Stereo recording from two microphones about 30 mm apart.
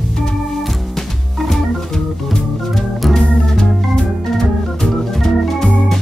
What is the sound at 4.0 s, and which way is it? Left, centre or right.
Organ, centre.